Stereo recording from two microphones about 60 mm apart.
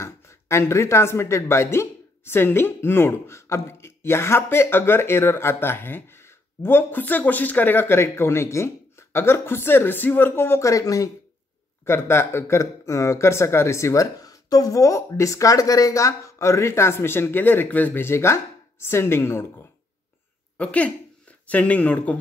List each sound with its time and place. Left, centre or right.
0.0 s speech: left
10.6 s speech: left
11.8 s speech: left
14.2 s speech: left
18.0 s speech: left
20.5 s speech: left